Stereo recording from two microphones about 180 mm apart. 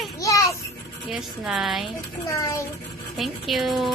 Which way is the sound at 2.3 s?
20° left (ahead or behind).